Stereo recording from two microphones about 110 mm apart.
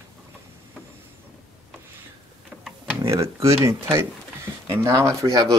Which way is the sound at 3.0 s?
25° right (ahead or behind).